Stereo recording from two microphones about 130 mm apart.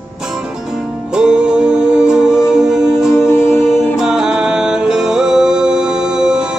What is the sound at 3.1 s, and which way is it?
Music, 20° left (ahead or behind).